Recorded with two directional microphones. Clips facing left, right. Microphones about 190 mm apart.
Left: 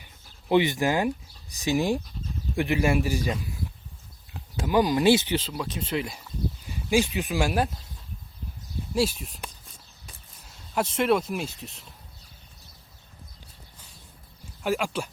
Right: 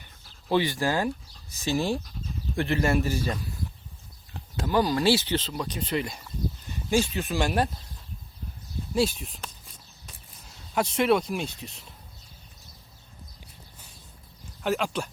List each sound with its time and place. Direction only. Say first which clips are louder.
0.0 s speech: left 1 dB; 15° left (ahead or behind)
5.5 s speech: even; 5° left (ahead or behind)
9.0 s speech: even; centre (ahead or behind)
10.4 s speech: even; centre (ahead or behind)
14.6 s speech: even; 5° left (ahead or behind)